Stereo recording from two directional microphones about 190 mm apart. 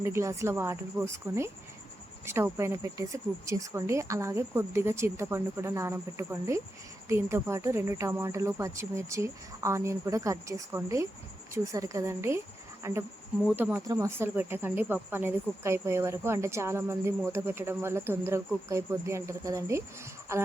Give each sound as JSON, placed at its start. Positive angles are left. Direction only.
{"t": 0.0, "sound": "speech", "side_deg": -15}
{"t": 12.8, "sound": "insect", "side_deg": -15}
{"t": 13.6, "sound": "speech", "side_deg": -10}